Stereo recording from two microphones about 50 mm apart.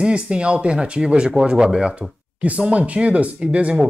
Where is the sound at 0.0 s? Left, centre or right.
Right.